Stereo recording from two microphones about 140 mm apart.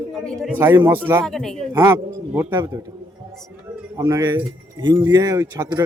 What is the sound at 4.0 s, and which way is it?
Speech, 25° right (ahead or behind).